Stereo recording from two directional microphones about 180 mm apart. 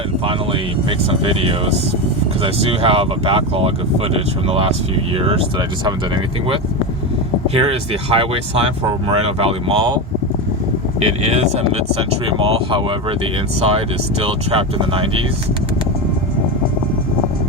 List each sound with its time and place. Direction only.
0.9 s speech: 30° right (ahead or behind)
7.4 s speech: 30° right (ahead or behind)
11.0 s speech: 35° right (ahead or behind)